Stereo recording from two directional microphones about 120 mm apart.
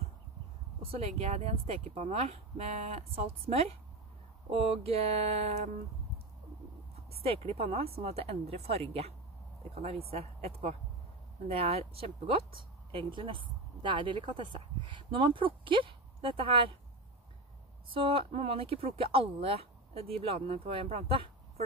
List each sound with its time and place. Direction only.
0.8 s speech: 60° right (ahead or behind)
7.2 s speech: 55° right (ahead or behind)
17.8 s speech: 45° right (ahead or behind)